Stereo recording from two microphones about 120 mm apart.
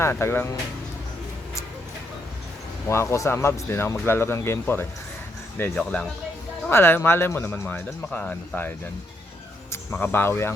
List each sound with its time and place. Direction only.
0.0 s speech: 20° left (ahead or behind)
2.8 s speech: 20° left (ahead or behind)
5.7 s speech: 5° left (ahead or behind)
6.7 s speech: 20° left (ahead or behind)
9.9 s speech: 20° left (ahead or behind)